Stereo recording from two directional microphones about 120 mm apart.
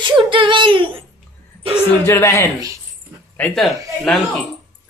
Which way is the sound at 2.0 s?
20° left (ahead or behind).